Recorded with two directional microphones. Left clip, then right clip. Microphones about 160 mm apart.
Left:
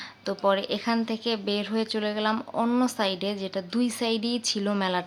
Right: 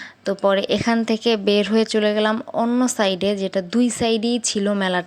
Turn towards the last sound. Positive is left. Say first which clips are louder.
# right 6 dB
turn(degrees=-35)  # may be behind; listen again after turning